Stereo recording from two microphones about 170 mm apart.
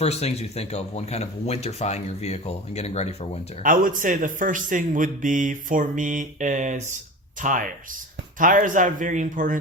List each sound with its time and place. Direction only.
0.0 s speech: 40° left (ahead or behind)
3.6 s a man's voice: 50° right (ahead or behind)